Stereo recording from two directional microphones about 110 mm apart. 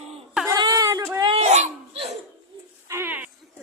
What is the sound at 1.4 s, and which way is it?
Dog, 90° right.